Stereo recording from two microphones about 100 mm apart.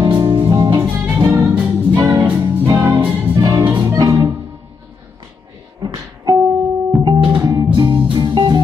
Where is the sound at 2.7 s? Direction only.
35° right (ahead or behind).